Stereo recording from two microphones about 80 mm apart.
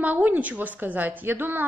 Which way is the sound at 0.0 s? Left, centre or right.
Right.